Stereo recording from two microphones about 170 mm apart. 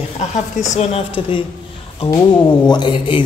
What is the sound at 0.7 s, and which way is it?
Speech, 30° left (ahead or behind).